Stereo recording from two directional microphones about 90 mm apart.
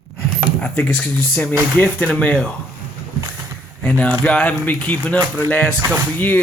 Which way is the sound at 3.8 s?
15° left (ahead or behind).